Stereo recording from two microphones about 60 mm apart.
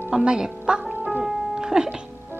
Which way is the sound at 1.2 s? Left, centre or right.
Centre.